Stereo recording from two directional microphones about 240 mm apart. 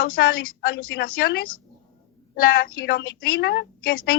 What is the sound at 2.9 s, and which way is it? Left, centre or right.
Speech, left.